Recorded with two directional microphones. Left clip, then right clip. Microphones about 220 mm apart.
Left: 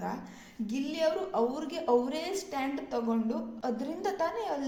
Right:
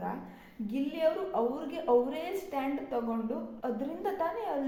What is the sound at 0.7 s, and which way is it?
A woman's voice, 45° left (ahead or behind).